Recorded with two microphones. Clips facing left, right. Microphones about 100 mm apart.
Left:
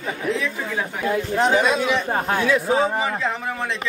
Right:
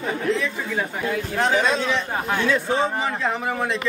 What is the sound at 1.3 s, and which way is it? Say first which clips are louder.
Speech: left 2 dB; 20° left (ahead or behind).